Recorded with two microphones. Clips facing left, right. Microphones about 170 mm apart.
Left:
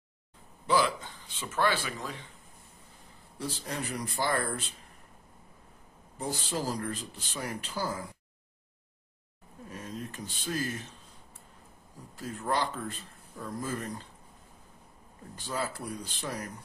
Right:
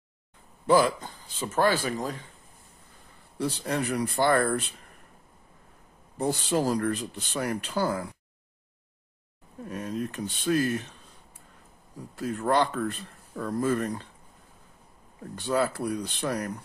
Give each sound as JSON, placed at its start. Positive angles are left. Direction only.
{"t": 0.7, "sound": "speech", "side_deg": -45}
{"t": 3.3, "sound": "speech", "side_deg": -65}
{"t": 6.1, "sound": "speech", "side_deg": -65}
{"t": 9.7, "sound": "speech", "side_deg": -65}
{"t": 12.2, "sound": "speech", "side_deg": -65}
{"t": 15.3, "sound": "speech", "side_deg": -65}